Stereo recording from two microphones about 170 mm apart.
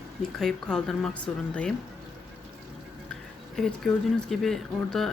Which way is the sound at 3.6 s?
Centre (ahead or behind).